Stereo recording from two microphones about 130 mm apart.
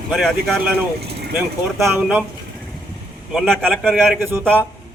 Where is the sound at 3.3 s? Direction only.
5° left (ahead or behind).